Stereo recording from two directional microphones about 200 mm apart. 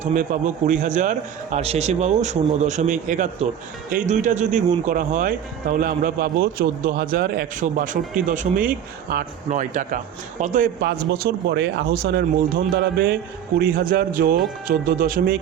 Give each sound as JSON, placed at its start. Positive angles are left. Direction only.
{"t": 0.0, "sound": "a man's voice", "side_deg": -40}